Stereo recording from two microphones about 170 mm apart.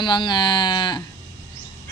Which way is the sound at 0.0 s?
25° left (ahead or behind).